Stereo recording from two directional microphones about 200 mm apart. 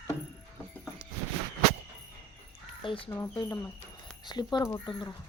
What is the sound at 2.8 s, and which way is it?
Speech, 25° left (ahead or behind).